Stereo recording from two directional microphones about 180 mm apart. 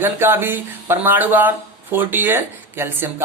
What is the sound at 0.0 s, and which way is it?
Speech, 10° right (ahead or behind).